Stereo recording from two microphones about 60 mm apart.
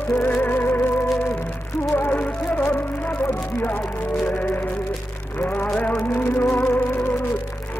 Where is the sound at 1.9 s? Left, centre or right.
Left.